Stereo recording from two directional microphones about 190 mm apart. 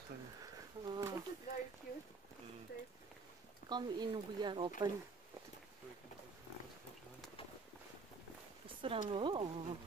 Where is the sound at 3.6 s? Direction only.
20° right (ahead or behind).